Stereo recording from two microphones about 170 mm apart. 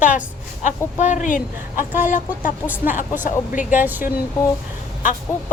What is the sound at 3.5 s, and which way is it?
Speech, 50° left (ahead or behind).